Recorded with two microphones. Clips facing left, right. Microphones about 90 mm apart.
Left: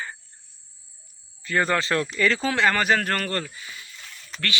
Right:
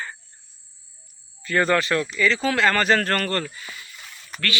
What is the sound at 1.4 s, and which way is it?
Speech, 20° left (ahead or behind).